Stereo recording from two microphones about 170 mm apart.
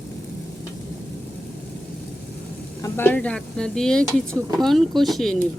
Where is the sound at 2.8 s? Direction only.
10° left (ahead or behind).